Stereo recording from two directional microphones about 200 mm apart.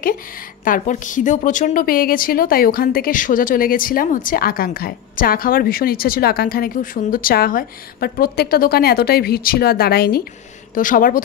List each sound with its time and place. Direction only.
0.7 s a woman's voice: 40° left (ahead or behind)